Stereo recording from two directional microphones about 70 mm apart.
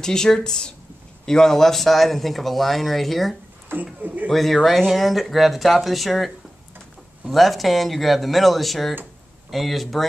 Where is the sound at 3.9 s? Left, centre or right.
Right.